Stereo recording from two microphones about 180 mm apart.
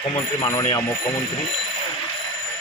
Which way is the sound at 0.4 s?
20° left (ahead or behind).